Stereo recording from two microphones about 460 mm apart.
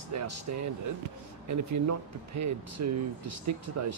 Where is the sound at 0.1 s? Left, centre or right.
Right.